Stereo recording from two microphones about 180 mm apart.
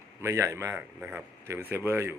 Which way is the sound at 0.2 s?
15° right (ahead or behind).